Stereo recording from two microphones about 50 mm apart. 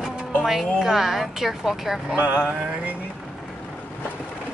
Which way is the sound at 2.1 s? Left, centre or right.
Right.